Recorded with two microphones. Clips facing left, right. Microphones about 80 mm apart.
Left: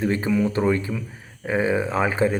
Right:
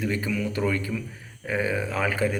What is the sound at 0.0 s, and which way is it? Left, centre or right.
Speech, left.